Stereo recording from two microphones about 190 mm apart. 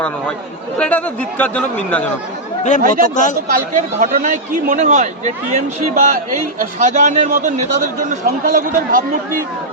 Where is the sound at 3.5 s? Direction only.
45° right (ahead or behind).